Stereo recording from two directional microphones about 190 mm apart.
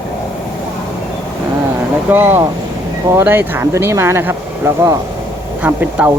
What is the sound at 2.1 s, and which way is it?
Speech, 10° right (ahead or behind).